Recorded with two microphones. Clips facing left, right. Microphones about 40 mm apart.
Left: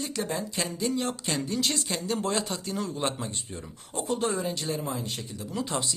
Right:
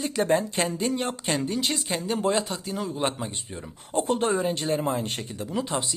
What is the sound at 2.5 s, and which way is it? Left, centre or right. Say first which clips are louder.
Speech: right 1 dB; centre.